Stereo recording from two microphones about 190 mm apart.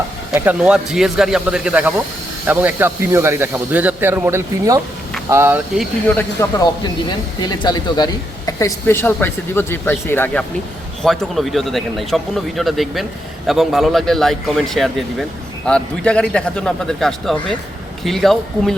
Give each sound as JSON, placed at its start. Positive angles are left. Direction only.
{"t": 0.3, "sound": "a man's voice", "side_deg": -5}
{"t": 6.1, "sound": "a man's voice", "side_deg": 15}